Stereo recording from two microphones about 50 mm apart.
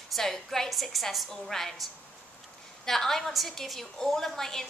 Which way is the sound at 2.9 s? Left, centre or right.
Centre.